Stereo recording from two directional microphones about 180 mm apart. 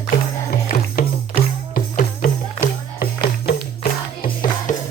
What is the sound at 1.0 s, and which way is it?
Music, 55° left (ahead or behind).